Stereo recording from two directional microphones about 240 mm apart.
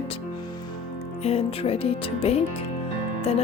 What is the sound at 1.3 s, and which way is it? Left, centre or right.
Speech, left.